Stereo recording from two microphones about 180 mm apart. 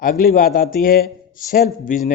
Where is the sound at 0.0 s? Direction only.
50° left (ahead or behind).